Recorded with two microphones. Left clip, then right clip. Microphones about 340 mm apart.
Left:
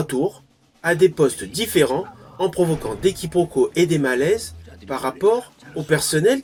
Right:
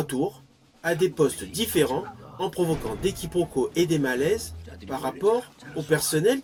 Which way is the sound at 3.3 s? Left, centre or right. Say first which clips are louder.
Left 5 dB; right.